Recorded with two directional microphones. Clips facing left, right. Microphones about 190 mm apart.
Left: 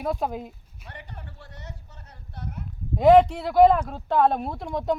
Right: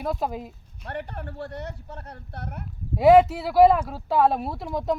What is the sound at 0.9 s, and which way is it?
Speech, 60° right (ahead or behind).